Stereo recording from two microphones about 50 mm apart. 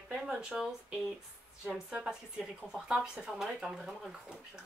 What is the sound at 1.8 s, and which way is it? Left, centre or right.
Speech, centre.